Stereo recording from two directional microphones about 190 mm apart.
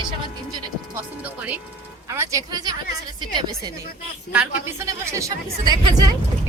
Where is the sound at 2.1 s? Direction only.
15° right (ahead or behind).